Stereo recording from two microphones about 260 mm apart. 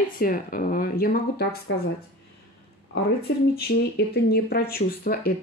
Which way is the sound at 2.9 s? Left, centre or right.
Left.